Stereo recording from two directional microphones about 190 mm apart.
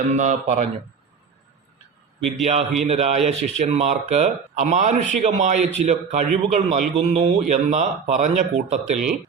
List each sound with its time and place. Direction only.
0.1 s a man's voice: 40° right (ahead or behind)
2.4 s a man's voice: 35° right (ahead or behind)
8.8 s speech: centre (ahead or behind)